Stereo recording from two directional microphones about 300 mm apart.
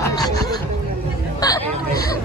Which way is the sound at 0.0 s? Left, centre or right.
Centre.